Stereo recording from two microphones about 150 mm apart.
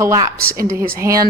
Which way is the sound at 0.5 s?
75° right (ahead or behind).